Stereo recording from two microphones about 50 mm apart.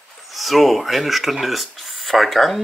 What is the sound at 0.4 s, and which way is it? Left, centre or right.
Speech, centre.